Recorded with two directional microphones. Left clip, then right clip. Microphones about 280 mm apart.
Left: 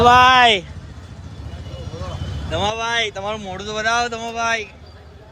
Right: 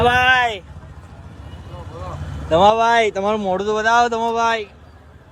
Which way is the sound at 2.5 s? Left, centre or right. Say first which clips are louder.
Right 8 dB; centre.